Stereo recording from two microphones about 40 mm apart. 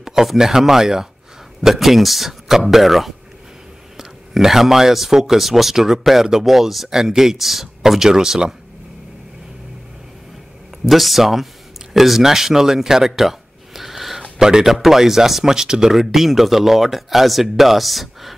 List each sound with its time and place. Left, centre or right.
0.0 s speech: centre
10.9 s speech: centre
14.4 s speech: centre